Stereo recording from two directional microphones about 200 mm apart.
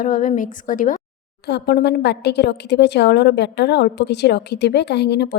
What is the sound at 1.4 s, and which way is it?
A woman's voice, 60° left (ahead or behind).